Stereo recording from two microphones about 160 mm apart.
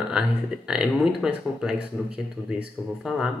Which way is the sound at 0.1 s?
5° right (ahead or behind).